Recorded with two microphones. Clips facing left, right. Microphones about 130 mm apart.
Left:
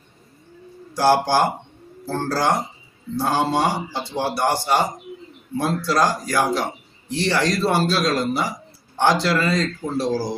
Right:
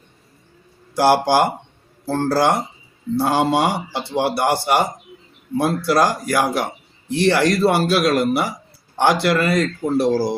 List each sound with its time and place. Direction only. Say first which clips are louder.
0.9 s a man's voice: right 2 dB; 15° right (ahead or behind)